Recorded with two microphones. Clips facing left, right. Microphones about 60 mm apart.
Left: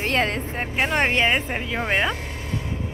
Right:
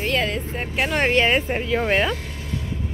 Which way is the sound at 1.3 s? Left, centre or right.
Centre.